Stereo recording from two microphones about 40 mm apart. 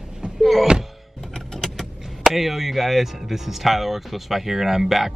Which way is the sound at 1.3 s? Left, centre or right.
Centre.